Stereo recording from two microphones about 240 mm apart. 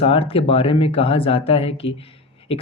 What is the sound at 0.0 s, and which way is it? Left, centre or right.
Speech, left.